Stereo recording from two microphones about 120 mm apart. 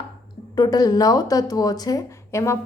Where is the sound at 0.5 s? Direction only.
30° left (ahead or behind).